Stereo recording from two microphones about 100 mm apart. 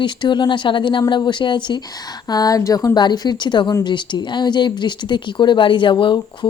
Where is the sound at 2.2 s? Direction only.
40° left (ahead or behind).